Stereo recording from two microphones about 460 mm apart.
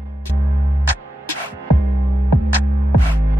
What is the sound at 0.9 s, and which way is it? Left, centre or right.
Music, right.